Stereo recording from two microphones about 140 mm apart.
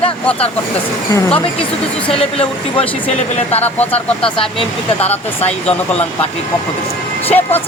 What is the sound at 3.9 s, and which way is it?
Speech, 40° left (ahead or behind).